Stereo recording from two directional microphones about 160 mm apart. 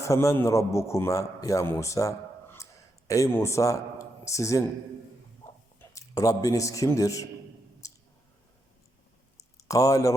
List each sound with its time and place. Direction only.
0.0 s a man's voice: 20° left (ahead or behind)
5.8 s a man's voice: 20° left (ahead or behind)
7.8 s clicking: 20° left (ahead or behind)
9.4 s a sound: 20° left (ahead or behind)